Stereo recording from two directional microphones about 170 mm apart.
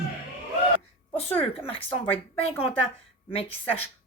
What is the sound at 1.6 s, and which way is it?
Speech, 35° left (ahead or behind).